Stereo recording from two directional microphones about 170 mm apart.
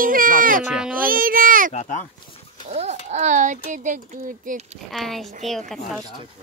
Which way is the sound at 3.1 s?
45° right (ahead or behind).